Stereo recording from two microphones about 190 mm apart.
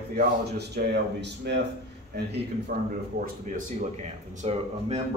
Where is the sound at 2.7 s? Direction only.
50° right (ahead or behind).